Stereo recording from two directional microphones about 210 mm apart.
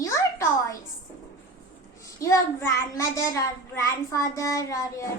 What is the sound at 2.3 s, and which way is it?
A child's voice, 10° left (ahead or behind).